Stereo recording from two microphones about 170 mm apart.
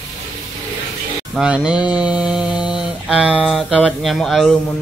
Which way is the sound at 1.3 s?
5° right (ahead or behind).